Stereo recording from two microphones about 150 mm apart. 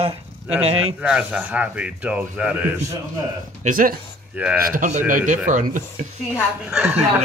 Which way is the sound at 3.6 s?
65° right (ahead or behind).